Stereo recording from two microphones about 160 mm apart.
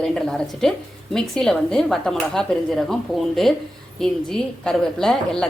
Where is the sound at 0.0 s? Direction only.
5° left (ahead or behind).